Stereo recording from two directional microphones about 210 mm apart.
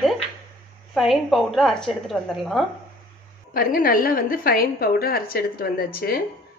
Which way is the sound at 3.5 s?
45° left (ahead or behind).